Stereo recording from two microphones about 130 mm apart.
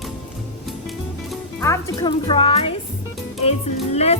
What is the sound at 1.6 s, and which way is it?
Music, 20° left (ahead or behind).